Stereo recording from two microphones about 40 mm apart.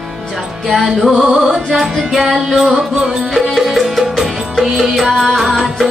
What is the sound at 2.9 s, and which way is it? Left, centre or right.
Music, centre.